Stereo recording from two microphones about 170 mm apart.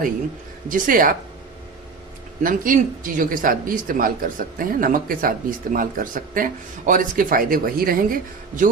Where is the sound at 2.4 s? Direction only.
50° right (ahead or behind).